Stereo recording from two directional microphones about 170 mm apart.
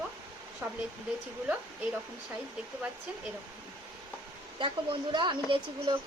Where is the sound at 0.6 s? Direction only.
10° right (ahead or behind).